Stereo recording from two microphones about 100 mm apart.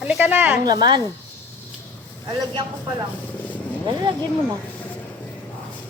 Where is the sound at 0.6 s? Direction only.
45° right (ahead or behind).